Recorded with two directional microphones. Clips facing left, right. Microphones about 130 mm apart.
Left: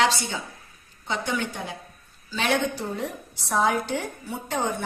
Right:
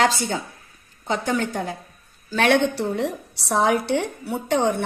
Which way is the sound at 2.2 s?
60° right (ahead or behind).